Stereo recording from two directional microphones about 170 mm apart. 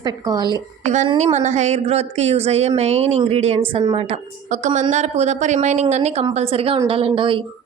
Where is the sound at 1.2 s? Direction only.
40° right (ahead or behind).